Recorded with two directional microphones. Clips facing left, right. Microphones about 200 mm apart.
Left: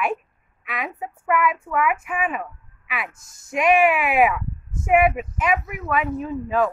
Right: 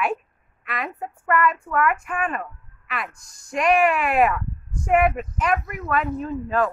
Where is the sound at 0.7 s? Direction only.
Centre (ahead or behind).